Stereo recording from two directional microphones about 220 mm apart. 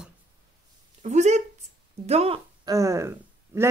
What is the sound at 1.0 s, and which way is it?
Speech, 30° right (ahead or behind).